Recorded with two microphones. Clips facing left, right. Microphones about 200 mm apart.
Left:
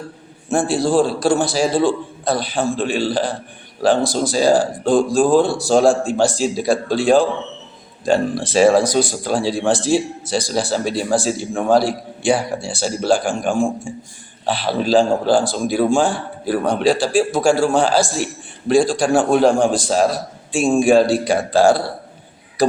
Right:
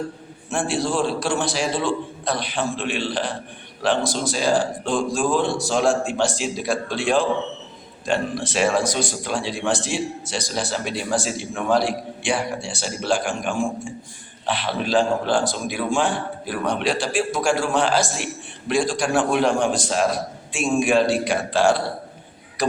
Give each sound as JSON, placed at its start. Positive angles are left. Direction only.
{"t": 0.5, "sound": "speech", "side_deg": 35}